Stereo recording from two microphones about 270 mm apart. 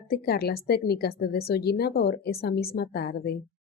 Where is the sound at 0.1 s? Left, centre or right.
Left.